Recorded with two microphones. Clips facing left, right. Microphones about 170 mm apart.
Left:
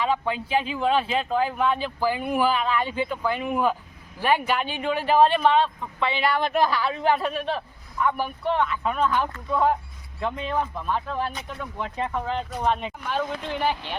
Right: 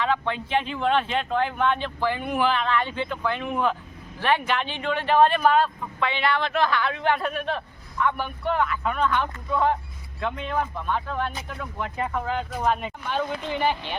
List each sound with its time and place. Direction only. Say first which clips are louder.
0.0 s speech: left 1 dB; 10° left (ahead or behind)
6.4 s a woman's voice: left 2 dB; 40° left (ahead or behind)
6.7 s a man's voice: left 1 dB; 5° left (ahead or behind)